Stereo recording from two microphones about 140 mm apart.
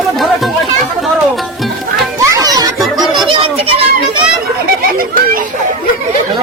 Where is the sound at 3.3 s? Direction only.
40° right (ahead or behind).